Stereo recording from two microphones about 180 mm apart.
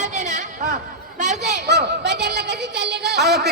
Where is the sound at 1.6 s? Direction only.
65° right (ahead or behind).